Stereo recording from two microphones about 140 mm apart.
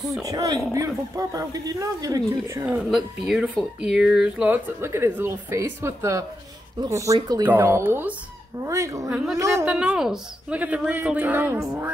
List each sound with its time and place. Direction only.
0.2 s speech: 25° right (ahead or behind)
2.6 s speech: 5° right (ahead or behind); by 7.4 s 30° right (ahead or behind)
7.4 s speech: 15° right (ahead or behind)
9.1 s a woman's voice: 5° right (ahead or behind)
9.4 s speech: 20° right (ahead or behind)
9.7 s speech: 5° right (ahead or behind)